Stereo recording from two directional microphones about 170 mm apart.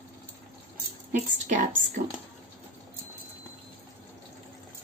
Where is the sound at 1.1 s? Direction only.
45° right (ahead or behind).